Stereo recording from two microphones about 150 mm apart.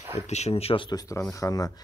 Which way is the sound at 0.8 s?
25° left (ahead or behind).